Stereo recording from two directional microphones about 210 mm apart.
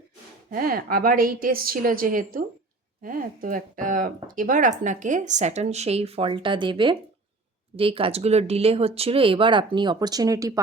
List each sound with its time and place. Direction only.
0.5 s a woman's voice: 45° right (ahead or behind); by 10.6 s 15° right (ahead or behind)